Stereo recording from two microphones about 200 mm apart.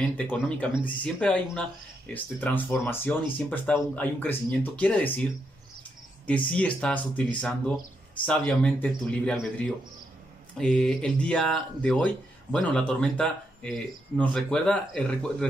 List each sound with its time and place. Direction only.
0.0 s speech: 5° left (ahead or behind)
6.2 s speech: 5° left (ahead or behind)